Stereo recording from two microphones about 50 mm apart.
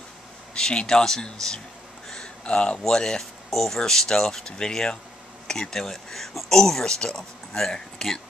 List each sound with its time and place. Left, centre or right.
0.6 s speech: centre